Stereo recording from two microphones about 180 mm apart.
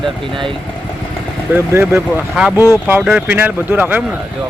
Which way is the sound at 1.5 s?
10° right (ahead or behind).